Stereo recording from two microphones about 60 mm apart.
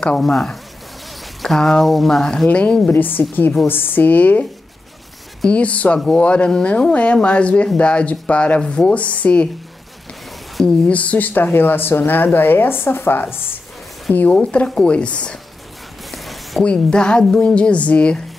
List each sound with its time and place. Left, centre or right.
0.2 s speech: centre
2.4 s speech: centre
2.9 s speech: left
5.5 s speech: left
10.9 s speech: left
14.1 s a woman's voice: left
16.1 s a sound: centre
16.6 s a woman's voice: centre